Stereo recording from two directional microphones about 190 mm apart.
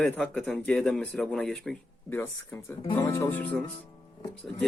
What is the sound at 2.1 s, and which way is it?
Speech, 15° left (ahead or behind).